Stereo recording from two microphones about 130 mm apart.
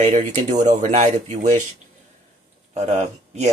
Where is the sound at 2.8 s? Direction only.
55° right (ahead or behind).